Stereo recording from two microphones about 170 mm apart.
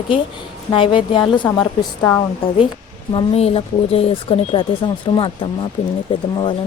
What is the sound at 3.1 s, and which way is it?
A woman's voice, 35° left (ahead or behind).